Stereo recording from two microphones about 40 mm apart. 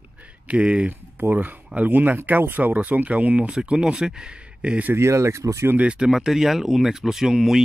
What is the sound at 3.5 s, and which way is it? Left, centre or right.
Speech, right.